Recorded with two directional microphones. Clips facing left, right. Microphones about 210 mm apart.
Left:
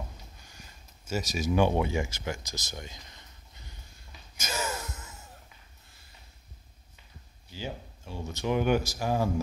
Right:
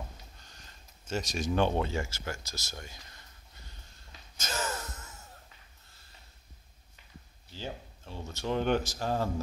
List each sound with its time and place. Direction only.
0.4 s a sound: 10° left (ahead or behind)
4.4 s gasp: 10° left (ahead or behind)
7.5 s speech: 10° left (ahead or behind)